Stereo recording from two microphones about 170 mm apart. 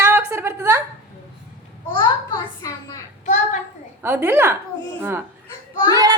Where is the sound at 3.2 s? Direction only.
45° left (ahead or behind).